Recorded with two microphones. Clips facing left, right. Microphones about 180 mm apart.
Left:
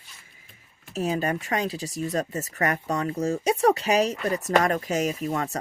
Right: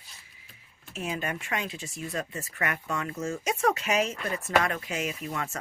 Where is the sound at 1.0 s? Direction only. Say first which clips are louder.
Left 7 dB; 35° left (ahead or behind).